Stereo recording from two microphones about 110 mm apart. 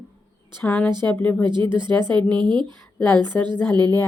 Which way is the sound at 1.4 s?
45° right (ahead or behind).